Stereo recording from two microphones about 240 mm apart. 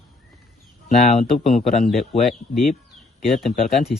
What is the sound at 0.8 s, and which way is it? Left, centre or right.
Speech, left.